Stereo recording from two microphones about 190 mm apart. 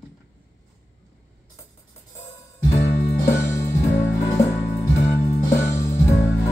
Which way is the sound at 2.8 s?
40° left (ahead or behind).